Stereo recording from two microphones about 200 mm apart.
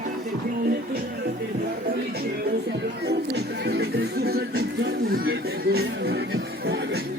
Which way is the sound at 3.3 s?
55° right (ahead or behind).